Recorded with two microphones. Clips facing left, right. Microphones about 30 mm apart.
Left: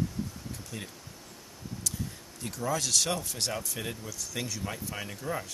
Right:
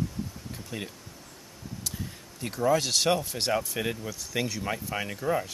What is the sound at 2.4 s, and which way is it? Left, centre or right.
Speech, right.